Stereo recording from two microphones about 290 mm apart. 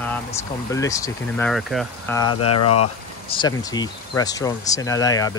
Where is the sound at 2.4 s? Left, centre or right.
Left.